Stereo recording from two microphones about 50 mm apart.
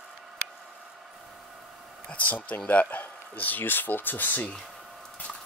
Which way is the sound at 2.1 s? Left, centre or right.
Left.